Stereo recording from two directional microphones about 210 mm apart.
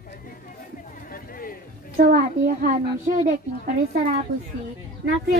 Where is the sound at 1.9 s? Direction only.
45° right (ahead or behind).